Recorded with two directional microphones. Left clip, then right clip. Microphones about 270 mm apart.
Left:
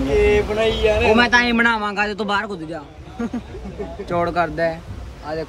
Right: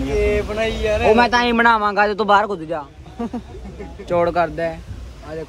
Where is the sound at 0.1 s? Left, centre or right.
Centre.